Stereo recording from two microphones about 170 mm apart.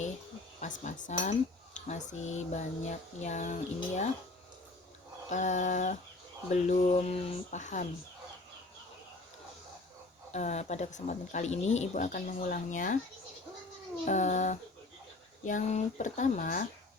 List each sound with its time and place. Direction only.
0.6 s speech: 45° left (ahead or behind)
5.3 s speech: 45° left (ahead or behind)
10.3 s speech: 40° left (ahead or behind)
14.0 s speech: 45° left (ahead or behind)